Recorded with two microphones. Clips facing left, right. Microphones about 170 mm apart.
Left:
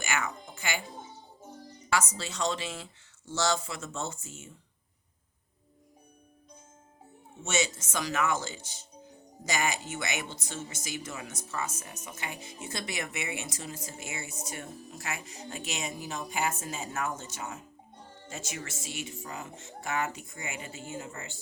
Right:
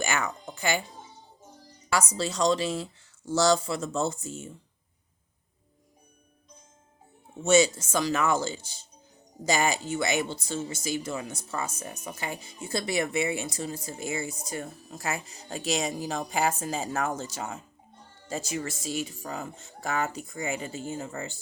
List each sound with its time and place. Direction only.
0.0 s speech: 35° right (ahead or behind)
1.9 s speech: 35° right (ahead or behind)
7.4 s speech: 35° right (ahead or behind)